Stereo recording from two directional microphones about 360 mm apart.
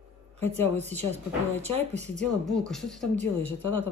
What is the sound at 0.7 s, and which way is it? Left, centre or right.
Speech, centre.